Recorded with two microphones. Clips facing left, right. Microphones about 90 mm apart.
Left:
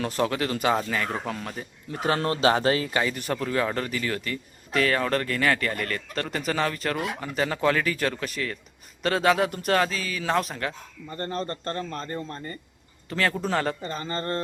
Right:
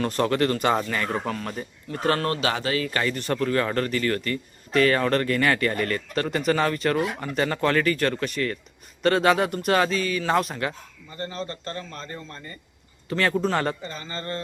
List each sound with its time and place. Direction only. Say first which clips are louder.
0.0 s a man's voice: right 3 dB; centre (ahead or behind)
2.0 s speech: even; 15° left (ahead or behind); by 2.9 s 30° left (ahead or behind)
2.9 s a man's voice: right 1 dB; 10° left (ahead or behind)
11.2 s speech: left 2 dB; 45° left (ahead or behind)
13.1 s a man's voice: right 3 dB; centre (ahead or behind)
13.8 s speech: left 3 dB; 40° left (ahead or behind)